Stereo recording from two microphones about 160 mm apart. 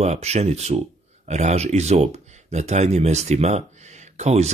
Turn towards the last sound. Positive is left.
turn(degrees=-45)  # may be behind; listen again after turning